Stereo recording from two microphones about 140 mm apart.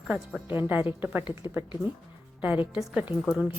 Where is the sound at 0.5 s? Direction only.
15° right (ahead or behind).